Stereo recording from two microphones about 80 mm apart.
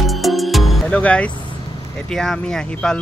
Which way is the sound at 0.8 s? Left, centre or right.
Centre.